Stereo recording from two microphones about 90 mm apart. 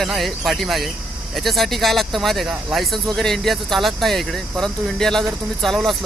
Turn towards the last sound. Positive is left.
turn(degrees=0)  # may be behind; listen again after turning